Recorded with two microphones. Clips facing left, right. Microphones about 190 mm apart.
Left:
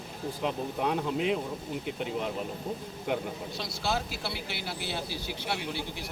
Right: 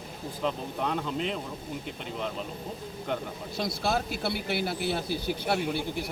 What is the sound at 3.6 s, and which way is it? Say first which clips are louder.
A man's voice: right 4 dB; 55° right (ahead or behind).